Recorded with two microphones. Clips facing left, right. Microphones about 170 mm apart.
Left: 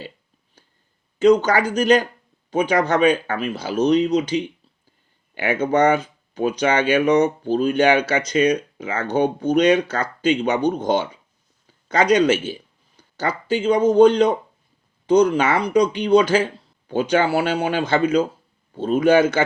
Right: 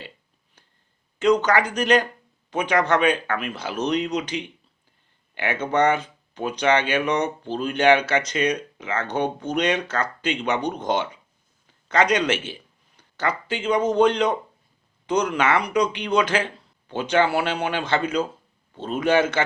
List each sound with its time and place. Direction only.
1.2 s speech: 35° left (ahead or behind)
11.9 s speech: 35° left (ahead or behind)